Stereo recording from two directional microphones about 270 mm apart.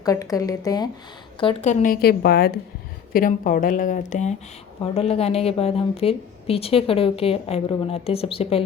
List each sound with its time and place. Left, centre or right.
0.0 s a woman's voice: centre